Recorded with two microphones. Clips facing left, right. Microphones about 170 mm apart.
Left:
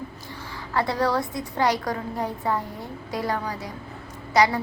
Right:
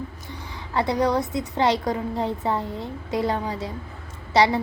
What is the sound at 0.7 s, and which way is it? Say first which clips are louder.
A woman's voice: right 2 dB; 20° right (ahead or behind).